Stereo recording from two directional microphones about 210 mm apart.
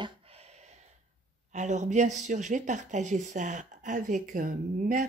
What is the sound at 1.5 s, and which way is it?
Speech, 35° right (ahead or behind).